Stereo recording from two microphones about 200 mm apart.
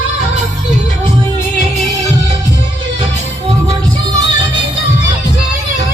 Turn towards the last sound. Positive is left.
turn(degrees=-20)  # may be behind; listen again after turning